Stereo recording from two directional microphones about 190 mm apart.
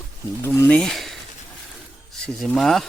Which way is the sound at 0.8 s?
Centre (ahead or behind).